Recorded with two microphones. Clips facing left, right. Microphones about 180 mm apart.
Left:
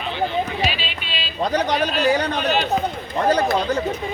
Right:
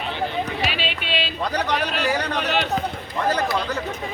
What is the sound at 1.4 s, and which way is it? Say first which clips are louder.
Speech: left 6 dB; 35° left (ahead or behind).